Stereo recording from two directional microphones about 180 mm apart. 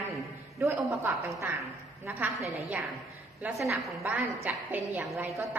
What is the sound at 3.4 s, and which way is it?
A woman's voice, 5° right (ahead or behind).